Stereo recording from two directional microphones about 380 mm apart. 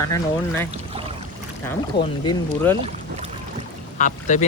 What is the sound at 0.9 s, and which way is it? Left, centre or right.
Boat, centre.